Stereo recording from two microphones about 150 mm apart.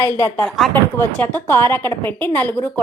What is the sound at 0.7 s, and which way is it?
A woman's voice, 10° left (ahead or behind).